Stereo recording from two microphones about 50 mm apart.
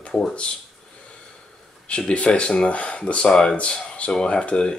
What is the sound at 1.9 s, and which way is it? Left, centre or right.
Speech, left.